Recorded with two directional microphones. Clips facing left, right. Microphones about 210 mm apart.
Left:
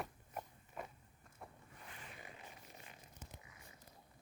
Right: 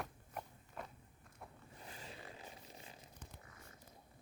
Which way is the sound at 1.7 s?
30° right (ahead or behind).